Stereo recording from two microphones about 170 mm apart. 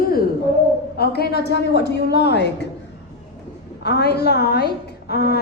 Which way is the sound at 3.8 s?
75° left (ahead or behind).